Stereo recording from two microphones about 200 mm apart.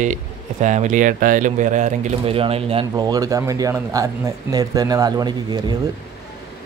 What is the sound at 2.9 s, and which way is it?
Speech, 20° right (ahead or behind).